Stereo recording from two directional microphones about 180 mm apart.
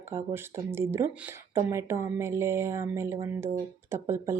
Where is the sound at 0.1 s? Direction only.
15° right (ahead or behind).